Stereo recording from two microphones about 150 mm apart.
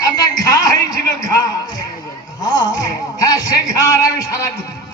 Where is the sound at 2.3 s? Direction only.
25° left (ahead or behind).